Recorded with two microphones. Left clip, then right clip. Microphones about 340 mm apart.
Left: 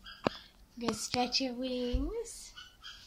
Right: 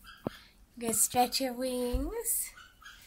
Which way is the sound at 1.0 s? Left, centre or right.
Right.